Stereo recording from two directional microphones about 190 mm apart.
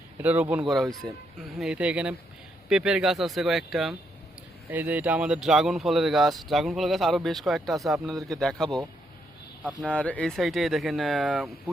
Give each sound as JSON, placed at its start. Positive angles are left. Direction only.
{"t": 0.2, "sound": "speech", "side_deg": -10}
{"t": 9.8, "sound": "speech", "side_deg": 5}